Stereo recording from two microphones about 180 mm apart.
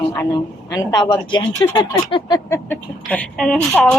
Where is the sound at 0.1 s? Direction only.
20° left (ahead or behind).